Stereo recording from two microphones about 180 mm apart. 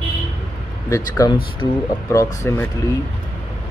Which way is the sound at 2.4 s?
15° left (ahead or behind).